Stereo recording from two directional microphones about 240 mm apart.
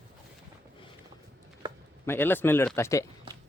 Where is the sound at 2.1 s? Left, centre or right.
Centre.